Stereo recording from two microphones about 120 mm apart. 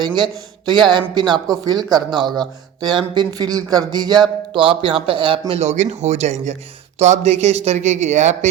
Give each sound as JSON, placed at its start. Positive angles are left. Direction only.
{"t": 0.2, "sound": "speech", "side_deg": -40}
{"t": 5.5, "sound": "speech", "side_deg": -75}